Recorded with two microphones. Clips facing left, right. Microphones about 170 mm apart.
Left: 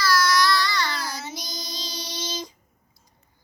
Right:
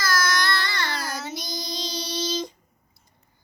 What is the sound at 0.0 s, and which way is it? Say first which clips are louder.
Child singing: left 4 dB; 50° right (ahead or behind).